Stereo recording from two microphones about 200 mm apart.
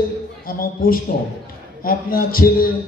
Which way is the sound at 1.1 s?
55° left (ahead or behind).